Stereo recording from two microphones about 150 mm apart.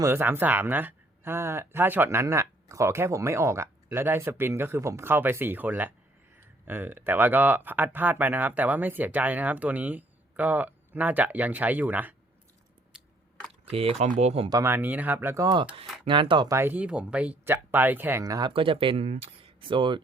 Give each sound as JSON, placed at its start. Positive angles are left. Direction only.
{"t": 0.0, "sound": "speech", "side_deg": -15}
{"t": 13.7, "sound": "speech", "side_deg": -40}
{"t": 14.5, "sound": "speech", "side_deg": -15}
{"t": 16.0, "sound": "speech", "side_deg": -35}
{"t": 16.5, "sound": "speech", "side_deg": -15}
{"t": 18.2, "sound": "speech", "side_deg": -25}